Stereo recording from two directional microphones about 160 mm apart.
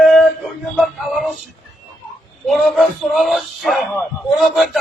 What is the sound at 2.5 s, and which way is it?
Speech, centre (ahead or behind).